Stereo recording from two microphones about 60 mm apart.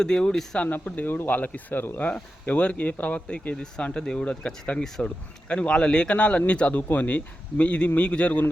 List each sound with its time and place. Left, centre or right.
0.0 s speech: centre
0.6 s a man's voice: left